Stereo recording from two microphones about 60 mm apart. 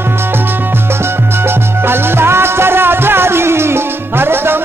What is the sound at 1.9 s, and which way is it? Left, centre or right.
Music, right.